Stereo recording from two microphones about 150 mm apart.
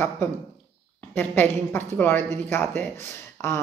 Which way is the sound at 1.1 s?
15° left (ahead or behind).